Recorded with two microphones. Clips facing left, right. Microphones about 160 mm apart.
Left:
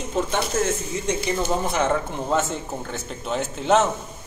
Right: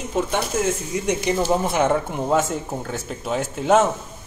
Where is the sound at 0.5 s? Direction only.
15° right (ahead or behind).